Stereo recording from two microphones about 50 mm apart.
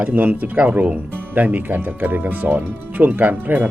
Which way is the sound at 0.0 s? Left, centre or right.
Right.